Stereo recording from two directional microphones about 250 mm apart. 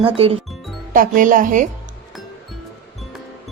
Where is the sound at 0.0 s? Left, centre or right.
Right.